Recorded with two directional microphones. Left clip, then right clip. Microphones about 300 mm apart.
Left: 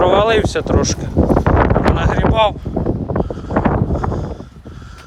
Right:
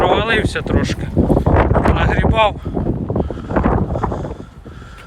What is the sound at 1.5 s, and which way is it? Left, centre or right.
Wind noise, right.